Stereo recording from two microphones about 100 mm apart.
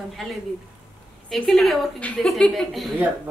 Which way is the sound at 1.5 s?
Centre (ahead or behind).